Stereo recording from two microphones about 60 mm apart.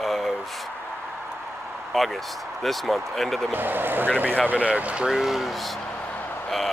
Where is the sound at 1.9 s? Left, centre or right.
Centre.